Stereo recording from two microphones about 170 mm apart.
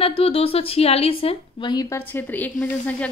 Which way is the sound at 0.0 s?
35° left (ahead or behind).